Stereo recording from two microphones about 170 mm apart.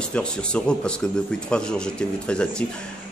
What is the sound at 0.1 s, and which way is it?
A man's voice, 5° left (ahead or behind).